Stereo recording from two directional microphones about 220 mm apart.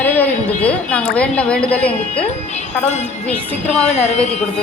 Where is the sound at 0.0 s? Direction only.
5° left (ahead or behind).